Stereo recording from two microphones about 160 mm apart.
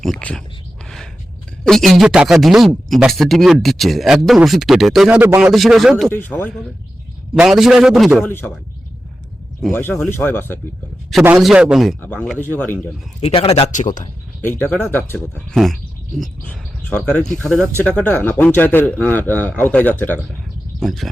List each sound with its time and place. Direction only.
0.0 s speech: 5° left (ahead or behind)
1.6 s speech: centre (ahead or behind)
5.5 s speech: centre (ahead or behind)
6.1 s speech: 10° left (ahead or behind)
7.3 s speech: 5° right (ahead or behind)
8.2 s speech: 10° left (ahead or behind)
9.7 s speech: 15° left (ahead or behind)
11.3 s speech: 5° right (ahead or behind)
12.0 s speech: 10° left (ahead or behind)
13.2 s speech: 35° left (ahead or behind)
14.4 s speech: 15° left (ahead or behind)
20.7 s speech: centre (ahead or behind)